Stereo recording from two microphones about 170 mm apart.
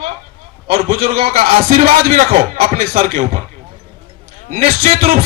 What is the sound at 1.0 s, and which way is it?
Speech, 35° right (ahead or behind).